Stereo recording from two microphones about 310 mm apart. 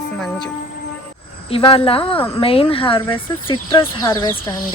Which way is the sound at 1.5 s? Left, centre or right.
Centre.